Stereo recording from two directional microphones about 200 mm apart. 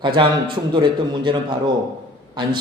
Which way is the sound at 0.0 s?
25° right (ahead or behind).